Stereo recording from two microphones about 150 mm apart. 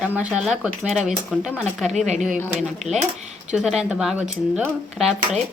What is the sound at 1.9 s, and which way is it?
Speech, 50° right (ahead or behind).